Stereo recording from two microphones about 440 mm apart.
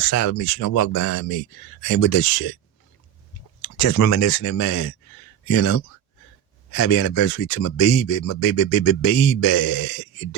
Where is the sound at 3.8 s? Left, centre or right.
Left.